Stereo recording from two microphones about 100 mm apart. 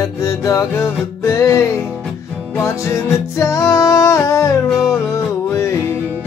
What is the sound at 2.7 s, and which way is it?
Music, 30° left (ahead or behind).